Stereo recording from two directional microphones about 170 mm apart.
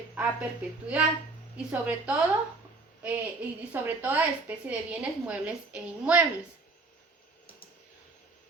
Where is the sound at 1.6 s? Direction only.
10° right (ahead or behind).